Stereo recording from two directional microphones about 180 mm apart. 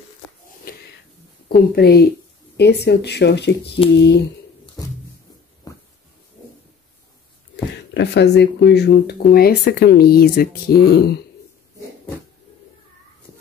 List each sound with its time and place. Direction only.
0.7 s wheeze: 55° left (ahead or behind)
1.8 s speech: 60° left (ahead or behind)
7.5 s speech: 75° left (ahead or behind)